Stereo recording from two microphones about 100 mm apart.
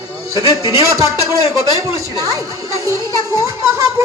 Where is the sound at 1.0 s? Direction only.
30° right (ahead or behind).